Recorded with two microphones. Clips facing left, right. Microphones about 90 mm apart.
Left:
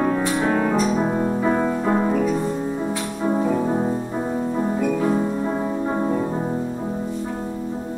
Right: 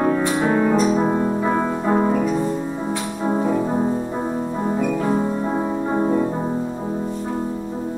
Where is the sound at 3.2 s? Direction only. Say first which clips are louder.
Even; 20° right (ahead or behind).